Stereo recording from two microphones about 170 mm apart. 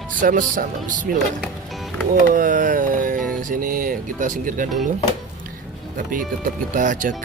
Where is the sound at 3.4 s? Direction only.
50° right (ahead or behind).